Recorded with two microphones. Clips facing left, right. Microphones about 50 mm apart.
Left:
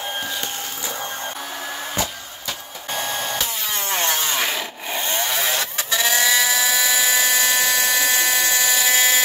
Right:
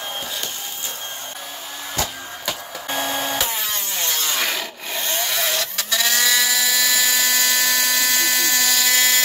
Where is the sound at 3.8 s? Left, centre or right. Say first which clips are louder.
Left 4 dB; left.